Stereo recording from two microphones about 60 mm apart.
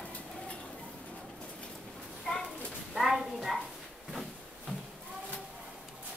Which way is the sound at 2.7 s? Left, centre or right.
Centre.